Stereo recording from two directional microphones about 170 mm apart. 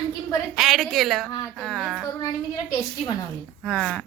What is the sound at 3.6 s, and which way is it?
Speech, 5° left (ahead or behind).